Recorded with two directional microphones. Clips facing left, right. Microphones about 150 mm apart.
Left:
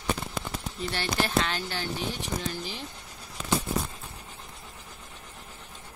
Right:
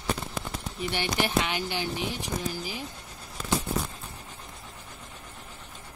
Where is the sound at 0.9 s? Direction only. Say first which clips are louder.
Even; 15° right (ahead or behind).